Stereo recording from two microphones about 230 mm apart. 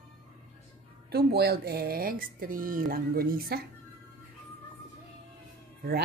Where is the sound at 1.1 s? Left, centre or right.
Right.